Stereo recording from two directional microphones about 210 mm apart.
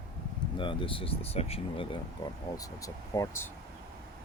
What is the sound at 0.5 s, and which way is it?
Speech, 25° left (ahead or behind).